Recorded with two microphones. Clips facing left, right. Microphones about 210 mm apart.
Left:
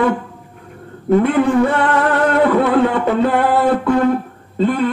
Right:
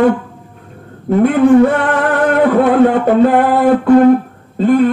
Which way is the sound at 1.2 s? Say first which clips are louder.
Right 10 dB; 50° right (ahead or behind).